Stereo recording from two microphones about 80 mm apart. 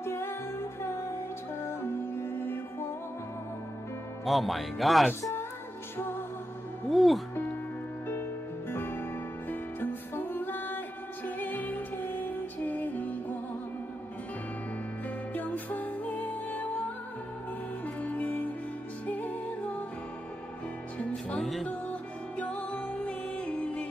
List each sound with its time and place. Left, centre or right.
0.0 s music: left
1.7 s music: left
4.2 s speech: centre
5.9 s music: left
6.9 s speech: centre
8.1 s music: left
15.3 s music: left
21.0 s music: centre
21.4 s music: centre
22.4 s music: centre